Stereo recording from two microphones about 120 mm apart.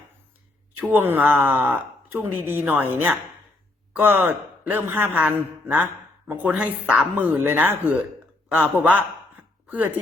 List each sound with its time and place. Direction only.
0.8 s speech: 15° right (ahead or behind)
4.0 s speech: 15° right (ahead or behind)